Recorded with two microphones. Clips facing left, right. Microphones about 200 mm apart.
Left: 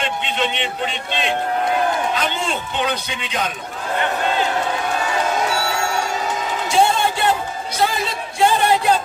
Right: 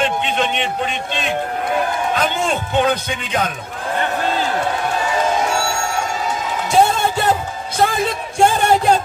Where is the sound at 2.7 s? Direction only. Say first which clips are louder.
Right 6 dB; 50° right (ahead or behind).